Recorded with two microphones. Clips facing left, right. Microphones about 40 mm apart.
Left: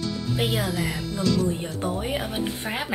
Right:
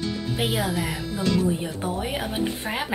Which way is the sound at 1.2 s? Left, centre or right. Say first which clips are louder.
Even; right.